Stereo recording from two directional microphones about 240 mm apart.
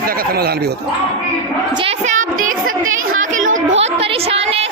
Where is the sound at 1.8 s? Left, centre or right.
Right.